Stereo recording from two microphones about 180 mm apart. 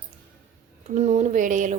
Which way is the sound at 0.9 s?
40° right (ahead or behind).